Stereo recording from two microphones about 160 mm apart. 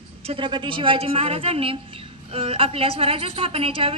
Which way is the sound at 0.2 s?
35° right (ahead or behind).